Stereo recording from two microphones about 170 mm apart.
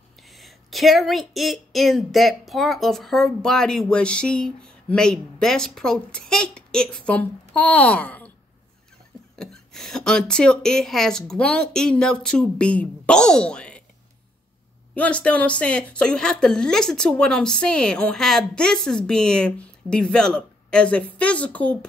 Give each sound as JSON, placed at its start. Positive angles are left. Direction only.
{"t": 0.3, "sound": "speech", "side_deg": 0}
{"t": 9.4, "sound": "speech", "side_deg": 5}
{"t": 15.0, "sound": "speech", "side_deg": 5}